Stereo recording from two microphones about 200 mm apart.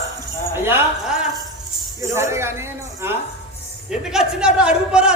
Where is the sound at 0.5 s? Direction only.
10° right (ahead or behind).